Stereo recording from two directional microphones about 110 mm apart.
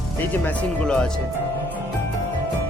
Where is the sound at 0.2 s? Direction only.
10° left (ahead or behind).